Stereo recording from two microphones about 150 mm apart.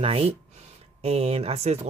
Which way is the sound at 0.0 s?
40° right (ahead or behind).